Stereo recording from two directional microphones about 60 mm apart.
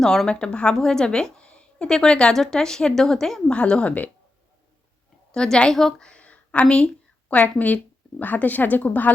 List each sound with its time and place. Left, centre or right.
0.0 s a woman's voice: centre
3.5 s speech: centre
5.3 s a woman's voice: centre
6.1 s a sound: left
8.2 s speech: left